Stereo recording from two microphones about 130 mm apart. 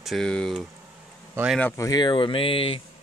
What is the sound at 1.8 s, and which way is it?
Speech, 30° left (ahead or behind).